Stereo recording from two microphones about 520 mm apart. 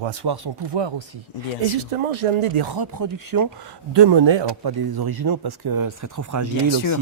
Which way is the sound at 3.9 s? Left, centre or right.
Right.